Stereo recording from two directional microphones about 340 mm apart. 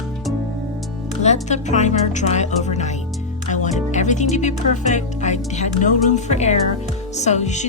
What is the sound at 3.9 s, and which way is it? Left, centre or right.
Music, left.